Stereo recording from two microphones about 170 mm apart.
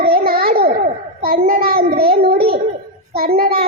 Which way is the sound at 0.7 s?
35° right (ahead or behind).